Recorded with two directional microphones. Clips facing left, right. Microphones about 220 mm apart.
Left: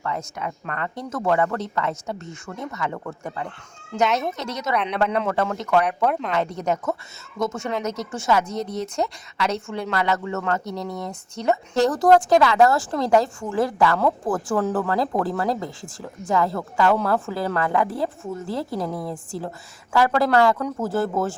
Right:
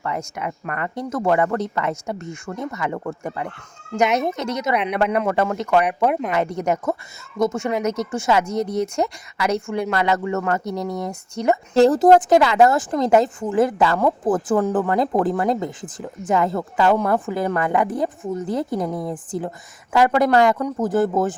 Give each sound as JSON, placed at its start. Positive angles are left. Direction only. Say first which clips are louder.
{"t": 0.0, "sound": "a woman's voice", "louder": "right 2 dB", "side_deg": -15}
{"t": 8.4, "sound": "speech", "louder": "right 5 dB", "side_deg": 20}
{"t": 9.6, "sound": "speech", "louder": "right 4 dB", "side_deg": -10}
{"t": 11.7, "sound": "a woman's voice", "louder": "right 4 dB", "side_deg": -25}